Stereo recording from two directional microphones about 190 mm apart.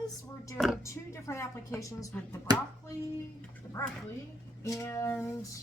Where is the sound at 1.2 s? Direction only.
15° left (ahead or behind).